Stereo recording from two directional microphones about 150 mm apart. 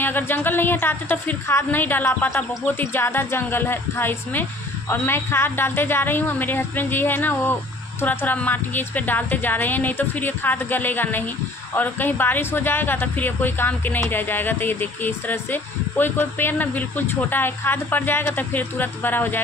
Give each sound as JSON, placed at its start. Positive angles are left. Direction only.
{"t": 0.0, "sound": "speech", "side_deg": 15}